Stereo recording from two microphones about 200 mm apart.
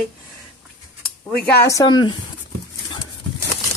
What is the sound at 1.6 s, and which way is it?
Speech, 15° left (ahead or behind).